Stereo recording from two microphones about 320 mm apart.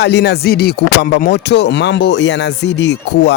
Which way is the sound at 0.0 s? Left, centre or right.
Left.